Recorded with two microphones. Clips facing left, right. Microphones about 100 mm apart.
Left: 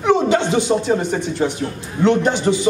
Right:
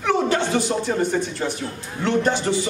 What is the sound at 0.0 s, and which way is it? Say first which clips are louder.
A man's voice: left 5 dB; 20° left (ahead or behind).